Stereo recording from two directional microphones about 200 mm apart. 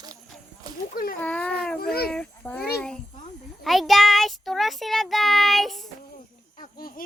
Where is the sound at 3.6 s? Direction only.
Centre (ahead or behind).